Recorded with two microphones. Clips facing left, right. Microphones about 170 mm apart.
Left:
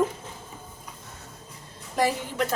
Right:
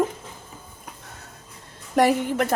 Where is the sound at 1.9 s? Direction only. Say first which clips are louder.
Right 6 dB; 65° right (ahead or behind).